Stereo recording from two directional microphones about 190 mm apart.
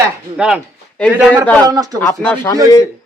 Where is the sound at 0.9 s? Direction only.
5° left (ahead or behind).